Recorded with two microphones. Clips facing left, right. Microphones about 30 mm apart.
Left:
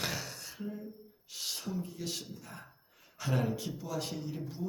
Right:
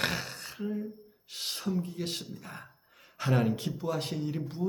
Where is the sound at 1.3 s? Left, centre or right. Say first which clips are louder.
Right 5 dB; right.